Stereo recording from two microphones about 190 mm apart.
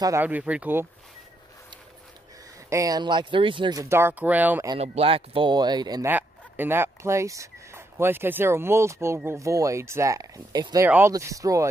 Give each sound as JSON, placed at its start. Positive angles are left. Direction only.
{"t": 0.0, "sound": "speech", "side_deg": -10}
{"t": 2.7, "sound": "speech", "side_deg": -20}
{"t": 4.7, "sound": "speech", "side_deg": -35}